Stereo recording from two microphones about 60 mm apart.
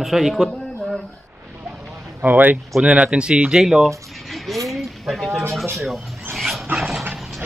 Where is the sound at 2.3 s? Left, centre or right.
Right.